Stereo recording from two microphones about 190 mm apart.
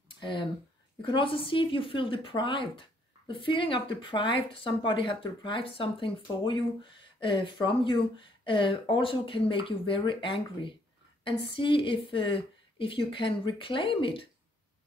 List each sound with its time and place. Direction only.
0.2 s speech: 25° left (ahead or behind)